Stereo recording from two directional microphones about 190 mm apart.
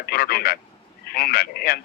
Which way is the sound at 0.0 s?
55° left (ahead or behind).